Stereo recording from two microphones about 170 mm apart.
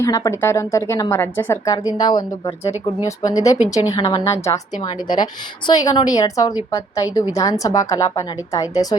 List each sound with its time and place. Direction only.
0.0 s a woman's voice: 15° left (ahead or behind)
3.2 s a woman's voice: 20° left (ahead or behind)